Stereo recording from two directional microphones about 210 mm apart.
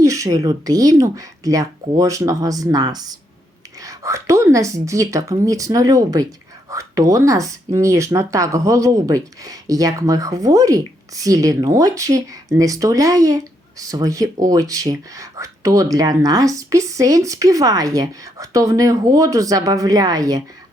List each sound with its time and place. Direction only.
0.0 s speech: 15° right (ahead or behind)